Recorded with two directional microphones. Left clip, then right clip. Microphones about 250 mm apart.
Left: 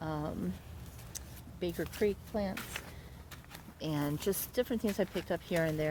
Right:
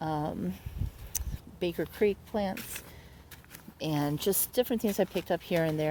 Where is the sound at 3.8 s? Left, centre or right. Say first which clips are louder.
Right 5 dB; right.